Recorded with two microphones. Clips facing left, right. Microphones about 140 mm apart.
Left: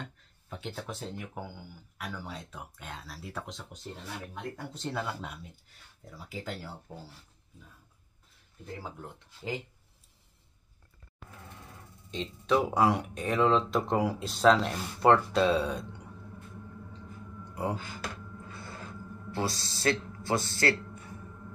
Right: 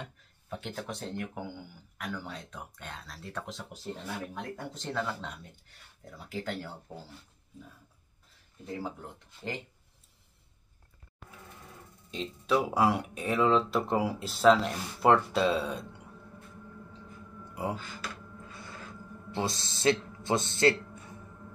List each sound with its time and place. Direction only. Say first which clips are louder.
0.0 s speech: left 1 dB; centre (ahead or behind)
8.8 s speech: right 3 dB; centre (ahead or behind)
12.1 s speech: left 1 dB; 5° right (ahead or behind)
19.3 s speech: even; 20° right (ahead or behind)